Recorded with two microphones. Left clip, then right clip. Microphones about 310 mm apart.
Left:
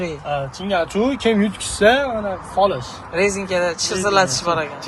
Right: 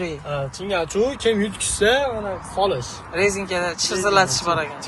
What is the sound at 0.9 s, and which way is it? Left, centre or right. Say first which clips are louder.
Speech: left 1 dB; centre.